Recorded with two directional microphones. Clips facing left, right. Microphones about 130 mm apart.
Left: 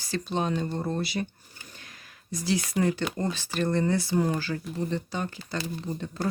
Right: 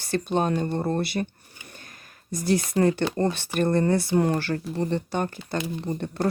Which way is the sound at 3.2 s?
60° right (ahead or behind).